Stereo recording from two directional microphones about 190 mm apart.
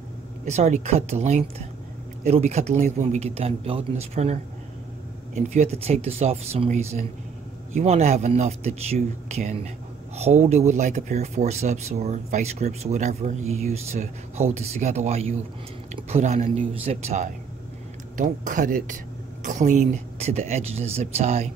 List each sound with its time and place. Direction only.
0.5 s speech: 35° right (ahead or behind)